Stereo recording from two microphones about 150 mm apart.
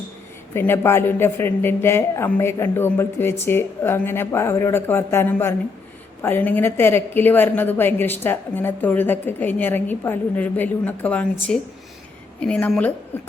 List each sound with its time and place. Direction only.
0.5 s a woman's voice: 15° left (ahead or behind)